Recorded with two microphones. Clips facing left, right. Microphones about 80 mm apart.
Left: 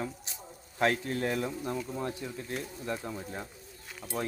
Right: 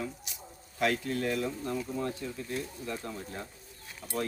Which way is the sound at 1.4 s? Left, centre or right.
Left.